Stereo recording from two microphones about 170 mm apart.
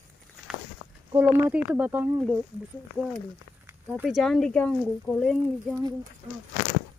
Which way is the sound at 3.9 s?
5° right (ahead or behind).